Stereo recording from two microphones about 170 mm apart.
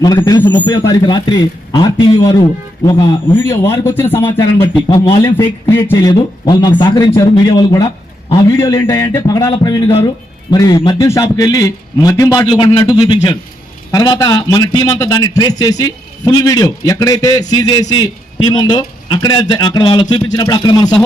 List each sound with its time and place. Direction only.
0.0 s a man's voice: 20° left (ahead or behind)
6.0 s a man's voice: 25° left (ahead or behind)